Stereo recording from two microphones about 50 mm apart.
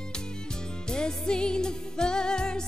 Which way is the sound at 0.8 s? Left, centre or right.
Centre.